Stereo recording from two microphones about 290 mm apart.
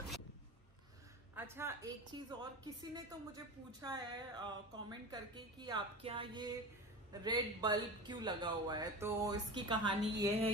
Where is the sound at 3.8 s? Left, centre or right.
Centre.